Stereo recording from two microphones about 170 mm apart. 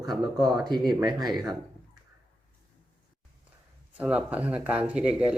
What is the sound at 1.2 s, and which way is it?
Speech, centre (ahead or behind).